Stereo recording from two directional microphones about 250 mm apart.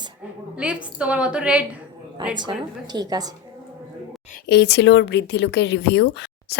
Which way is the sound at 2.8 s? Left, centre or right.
Centre.